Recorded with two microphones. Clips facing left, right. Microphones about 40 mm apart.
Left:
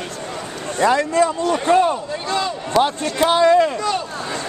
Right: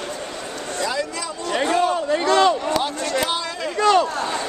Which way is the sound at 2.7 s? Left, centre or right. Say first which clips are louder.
Left 5 dB; left.